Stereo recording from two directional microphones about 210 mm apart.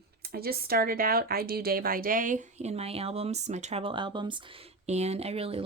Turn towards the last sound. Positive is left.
turn(degrees=-30)  # may be behind; listen again after turning